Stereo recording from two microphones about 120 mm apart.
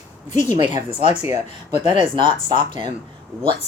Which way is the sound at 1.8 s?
45° right (ahead or behind).